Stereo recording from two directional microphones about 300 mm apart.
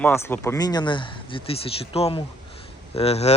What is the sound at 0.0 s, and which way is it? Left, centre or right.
Speech, centre.